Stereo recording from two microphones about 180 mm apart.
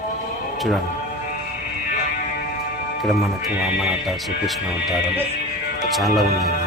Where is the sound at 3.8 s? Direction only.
Centre (ahead or behind).